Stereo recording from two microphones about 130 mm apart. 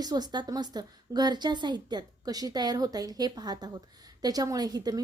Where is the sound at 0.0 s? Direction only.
30° right (ahead or behind).